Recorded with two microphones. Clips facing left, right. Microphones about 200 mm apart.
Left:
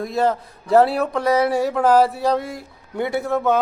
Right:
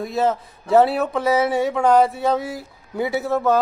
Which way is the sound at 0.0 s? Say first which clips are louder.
Left 1 dB; centre (ahead or behind).